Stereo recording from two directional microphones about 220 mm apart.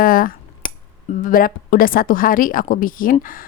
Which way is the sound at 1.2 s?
40° left (ahead or behind).